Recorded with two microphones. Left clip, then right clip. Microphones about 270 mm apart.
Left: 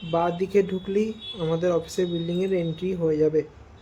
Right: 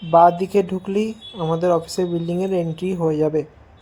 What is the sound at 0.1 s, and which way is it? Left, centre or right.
Speech, centre.